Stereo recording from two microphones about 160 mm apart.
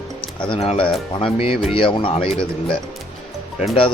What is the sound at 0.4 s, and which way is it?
Speech, 35° left (ahead or behind).